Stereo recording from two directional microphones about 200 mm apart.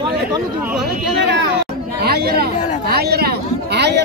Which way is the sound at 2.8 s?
55° right (ahead or behind).